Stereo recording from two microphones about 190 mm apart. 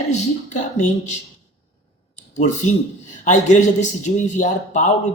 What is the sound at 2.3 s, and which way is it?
Speech, 40° left (ahead or behind).